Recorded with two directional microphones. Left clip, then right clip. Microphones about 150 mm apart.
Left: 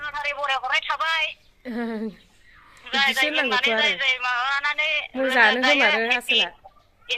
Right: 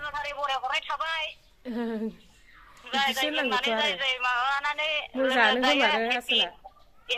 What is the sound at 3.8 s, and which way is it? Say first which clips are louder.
A man's voice: left 5 dB; 15° right (ahead or behind).